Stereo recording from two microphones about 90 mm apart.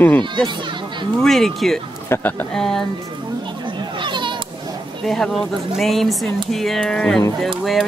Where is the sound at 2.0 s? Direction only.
25° left (ahead or behind).